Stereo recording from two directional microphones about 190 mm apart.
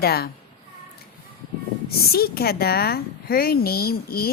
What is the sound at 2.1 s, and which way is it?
Speech, 55° left (ahead or behind).